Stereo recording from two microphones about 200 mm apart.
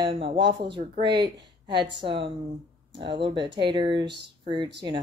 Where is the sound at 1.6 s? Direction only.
25° right (ahead or behind).